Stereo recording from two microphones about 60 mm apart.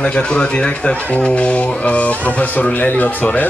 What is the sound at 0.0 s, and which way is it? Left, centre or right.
Speech, centre.